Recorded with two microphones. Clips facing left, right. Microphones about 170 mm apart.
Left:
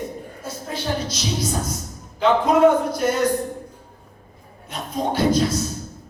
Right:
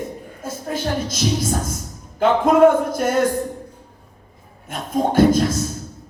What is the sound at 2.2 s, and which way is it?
Speech, 50° right (ahead or behind).